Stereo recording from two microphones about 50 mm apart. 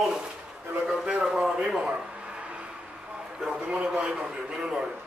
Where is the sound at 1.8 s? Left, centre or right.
Right.